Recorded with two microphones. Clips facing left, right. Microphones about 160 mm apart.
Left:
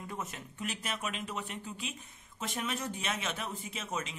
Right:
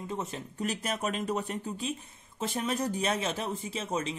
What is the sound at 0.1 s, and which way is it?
A man's voice, 30° right (ahead or behind).